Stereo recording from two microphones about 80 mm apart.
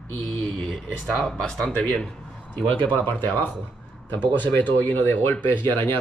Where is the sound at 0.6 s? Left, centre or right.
Centre.